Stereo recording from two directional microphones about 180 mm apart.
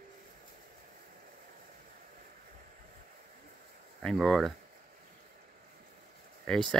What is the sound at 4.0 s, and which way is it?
Speech, 5° left (ahead or behind).